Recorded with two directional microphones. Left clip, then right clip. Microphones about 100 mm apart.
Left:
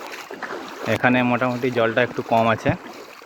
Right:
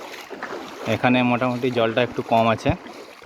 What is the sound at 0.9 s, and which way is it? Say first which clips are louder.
Speech: left 1 dB; 55° right (ahead or behind).